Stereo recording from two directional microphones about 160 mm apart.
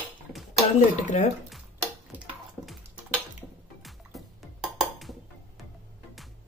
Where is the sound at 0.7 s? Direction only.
50° left (ahead or behind).